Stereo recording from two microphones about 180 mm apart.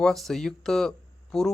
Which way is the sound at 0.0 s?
Centre (ahead or behind).